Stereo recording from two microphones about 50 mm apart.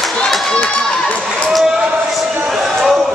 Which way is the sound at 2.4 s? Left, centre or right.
Centre.